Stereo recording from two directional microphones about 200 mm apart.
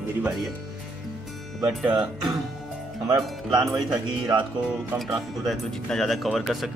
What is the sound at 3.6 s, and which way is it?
Speech, 20° right (ahead or behind).